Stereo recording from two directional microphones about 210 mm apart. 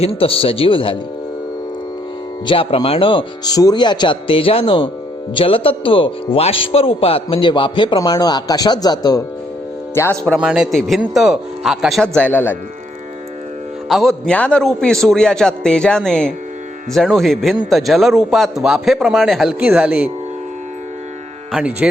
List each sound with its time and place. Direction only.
0.0 s speech: 25° left (ahead or behind)
2.5 s speech: 25° left (ahead or behind)
10.3 s a man's voice: 5° right (ahead or behind)
13.8 s a man's voice: centre (ahead or behind)
21.5 s speech: 5° right (ahead or behind)